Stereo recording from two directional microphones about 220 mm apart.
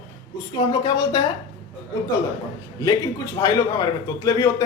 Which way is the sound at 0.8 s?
20° left (ahead or behind).